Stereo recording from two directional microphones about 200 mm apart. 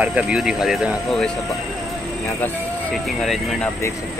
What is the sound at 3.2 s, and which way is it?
Speech, centre (ahead or behind).